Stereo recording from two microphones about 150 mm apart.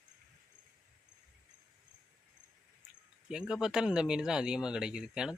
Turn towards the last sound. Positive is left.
turn(degrees=-5)  # may be behind; listen again after turning